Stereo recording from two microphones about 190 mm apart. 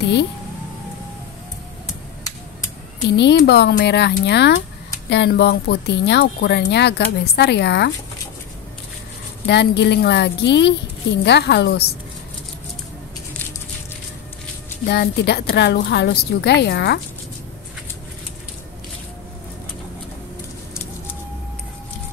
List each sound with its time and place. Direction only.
0.0 s speech: 65° left (ahead or behind)
3.2 s speech: 65° left (ahead or behind)
9.5 s speech: 65° left (ahead or behind)
14.9 s speech: 60° left (ahead or behind)